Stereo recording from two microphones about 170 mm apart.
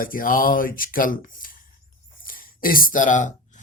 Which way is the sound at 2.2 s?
55° left (ahead or behind).